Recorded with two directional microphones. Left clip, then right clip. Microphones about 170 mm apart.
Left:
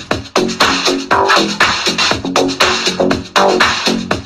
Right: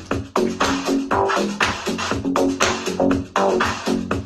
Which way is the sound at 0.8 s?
25° left (ahead or behind).